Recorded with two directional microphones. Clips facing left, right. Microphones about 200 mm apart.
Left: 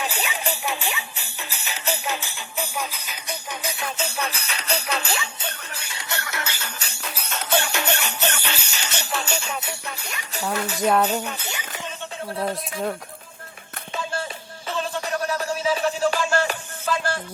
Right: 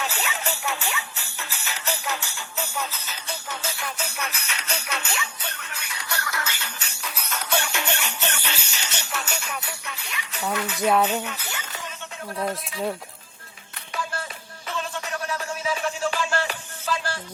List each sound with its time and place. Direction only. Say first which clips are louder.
0.0 s music: left 2 dB; 15° left (ahead or behind)
6.6 s music: left 2 dB; 40° left (ahead or behind); by 9.7 s 25° left (ahead or behind)
9.8 s jingle bell: left 2 dB; 40° left (ahead or behind)
10.5 s tambourine: left 1 dB; 40° left (ahead or behind)
10.8 s speech: left 1 dB; centre (ahead or behind)
11.2 s speech: left 2 dB; 35° left (ahead or behind)
11.4 s music: left 2 dB; 15° left (ahead or behind)
13.9 s music: left 3 dB; 25° left (ahead or behind); by 17.2 s 55° left (ahead or behind)